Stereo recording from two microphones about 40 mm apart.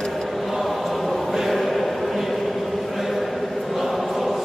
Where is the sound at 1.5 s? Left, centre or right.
Centre.